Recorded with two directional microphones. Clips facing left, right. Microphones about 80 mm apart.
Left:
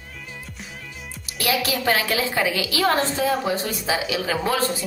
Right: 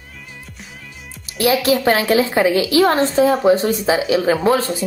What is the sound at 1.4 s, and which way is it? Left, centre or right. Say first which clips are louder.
A woman's voice: right 8 dB; right.